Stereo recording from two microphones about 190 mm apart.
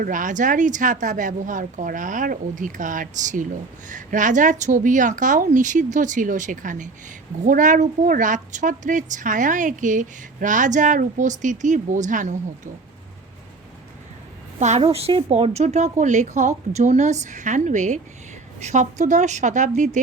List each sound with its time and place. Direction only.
0.0 s a woman's voice: 45° right (ahead or behind)
14.6 s a woman's voice: 40° right (ahead or behind)